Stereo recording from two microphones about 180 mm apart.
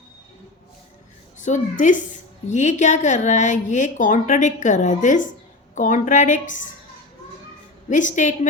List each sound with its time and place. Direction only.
1.4 s a woman's voice: 45° left (ahead or behind)
7.9 s a woman's voice: 45° left (ahead or behind)